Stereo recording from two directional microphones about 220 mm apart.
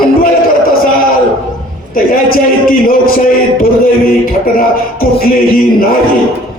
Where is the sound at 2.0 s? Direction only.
40° left (ahead or behind).